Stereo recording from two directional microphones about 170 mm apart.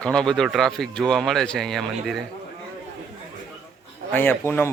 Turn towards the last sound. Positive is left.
turn(degrees=10)  # may be behind; listen again after turning